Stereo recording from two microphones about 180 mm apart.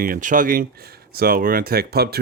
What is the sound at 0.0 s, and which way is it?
Speech, 50° right (ahead or behind).